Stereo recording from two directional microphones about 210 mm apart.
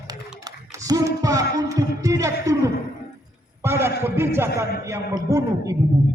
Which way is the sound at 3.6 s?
10° right (ahead or behind).